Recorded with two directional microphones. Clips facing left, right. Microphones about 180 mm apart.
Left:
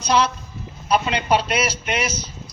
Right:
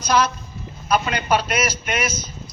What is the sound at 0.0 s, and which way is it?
A woman's voice, 25° left (ahead or behind).